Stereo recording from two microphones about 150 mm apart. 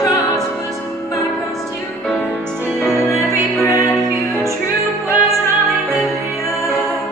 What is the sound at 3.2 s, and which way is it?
Music, 20° left (ahead or behind).